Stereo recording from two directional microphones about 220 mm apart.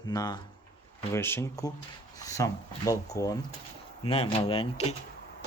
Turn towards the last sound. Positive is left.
turn(degrees=25)  # may be behind; listen again after turning